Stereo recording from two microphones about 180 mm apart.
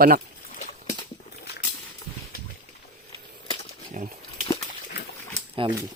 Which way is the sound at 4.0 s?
45° right (ahead or behind).